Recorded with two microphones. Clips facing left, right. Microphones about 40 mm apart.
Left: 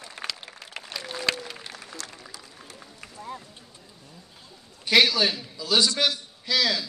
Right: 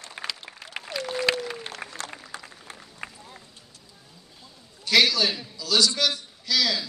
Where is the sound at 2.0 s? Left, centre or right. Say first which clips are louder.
Right 4 dB; right.